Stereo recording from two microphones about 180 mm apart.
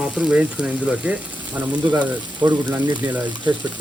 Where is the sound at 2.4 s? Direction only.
25° right (ahead or behind).